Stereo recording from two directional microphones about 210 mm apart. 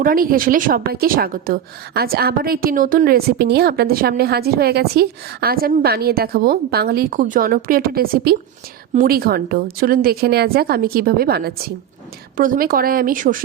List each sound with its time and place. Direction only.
0.0 s a woman's voice: 40° right (ahead or behind)